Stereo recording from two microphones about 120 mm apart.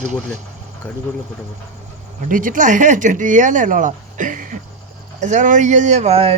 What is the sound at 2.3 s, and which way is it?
Speech, 90° right.